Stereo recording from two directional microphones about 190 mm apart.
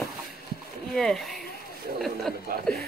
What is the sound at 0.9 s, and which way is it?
Speech, centre (ahead or behind).